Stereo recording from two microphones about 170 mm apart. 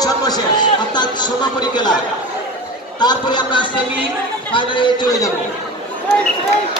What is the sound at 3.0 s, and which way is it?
A man's voice, 25° left (ahead or behind).